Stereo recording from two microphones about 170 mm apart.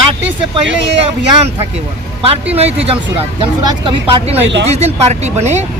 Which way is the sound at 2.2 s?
35° right (ahead or behind).